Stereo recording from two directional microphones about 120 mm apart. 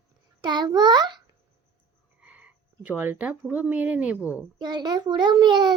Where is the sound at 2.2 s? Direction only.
10° right (ahead or behind).